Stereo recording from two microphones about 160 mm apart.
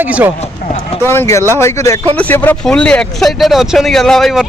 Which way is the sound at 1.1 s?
15° left (ahead or behind).